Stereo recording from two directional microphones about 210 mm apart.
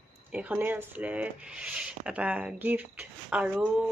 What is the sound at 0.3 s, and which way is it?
Speech, 5° right (ahead or behind).